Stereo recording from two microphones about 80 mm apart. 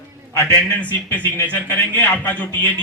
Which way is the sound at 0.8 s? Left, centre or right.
Left.